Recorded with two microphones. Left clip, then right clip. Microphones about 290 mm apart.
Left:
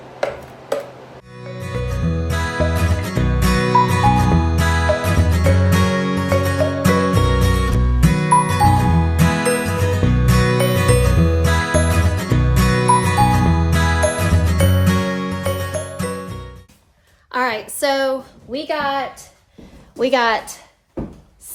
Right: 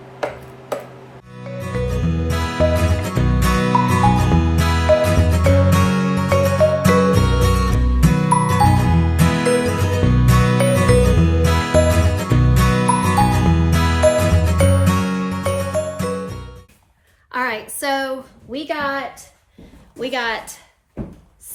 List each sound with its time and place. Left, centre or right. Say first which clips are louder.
1.4 s music: right 2 dB; centre
17.3 s a sound: left 2 dB; centre
20.0 s a woman's voice: left 6 dB; left